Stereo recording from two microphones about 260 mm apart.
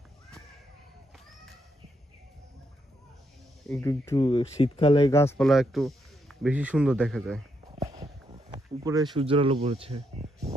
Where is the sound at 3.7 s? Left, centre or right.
Centre.